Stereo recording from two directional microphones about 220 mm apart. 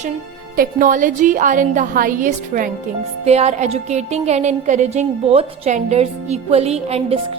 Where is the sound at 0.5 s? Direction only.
40° right (ahead or behind).